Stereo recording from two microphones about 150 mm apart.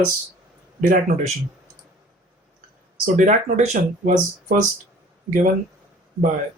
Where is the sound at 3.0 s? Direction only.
60° right (ahead or behind).